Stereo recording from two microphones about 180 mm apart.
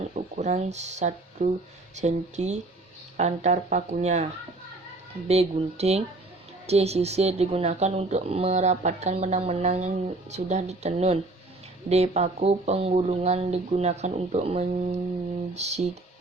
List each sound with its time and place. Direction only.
0.0 s speech: 40° right (ahead or behind)
5.3 s speech: 35° right (ahead or behind)